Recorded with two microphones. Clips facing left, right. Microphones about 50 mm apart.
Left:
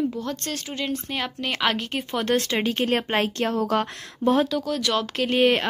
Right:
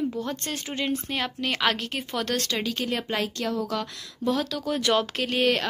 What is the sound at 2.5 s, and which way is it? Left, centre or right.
Speech, left.